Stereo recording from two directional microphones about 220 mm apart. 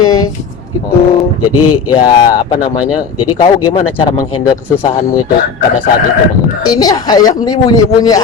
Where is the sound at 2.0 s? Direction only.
20° left (ahead or behind).